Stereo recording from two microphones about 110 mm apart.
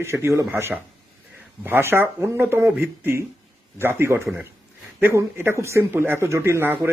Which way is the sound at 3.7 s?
25° right (ahead or behind).